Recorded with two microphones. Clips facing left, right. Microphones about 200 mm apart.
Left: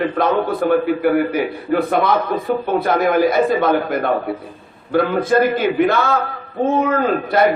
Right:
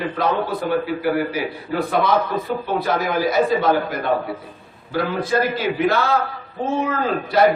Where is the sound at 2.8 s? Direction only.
55° left (ahead or behind).